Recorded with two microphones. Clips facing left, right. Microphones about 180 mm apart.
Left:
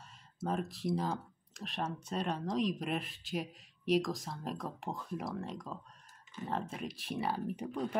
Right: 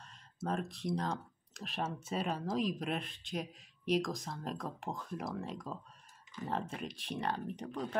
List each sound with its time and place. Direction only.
0.0 s speech: centre (ahead or behind)